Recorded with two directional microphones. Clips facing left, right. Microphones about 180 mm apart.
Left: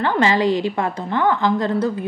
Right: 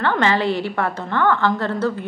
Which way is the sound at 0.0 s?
15° left (ahead or behind).